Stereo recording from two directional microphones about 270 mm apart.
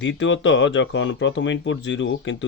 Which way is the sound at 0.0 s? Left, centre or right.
Left.